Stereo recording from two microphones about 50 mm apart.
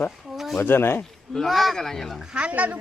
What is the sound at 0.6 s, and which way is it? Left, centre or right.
Speech, left.